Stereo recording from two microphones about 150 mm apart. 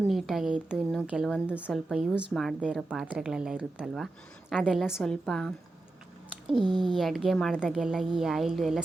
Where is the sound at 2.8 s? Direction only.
10° right (ahead or behind).